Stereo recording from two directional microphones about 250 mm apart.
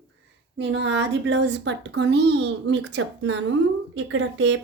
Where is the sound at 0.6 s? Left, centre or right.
Right.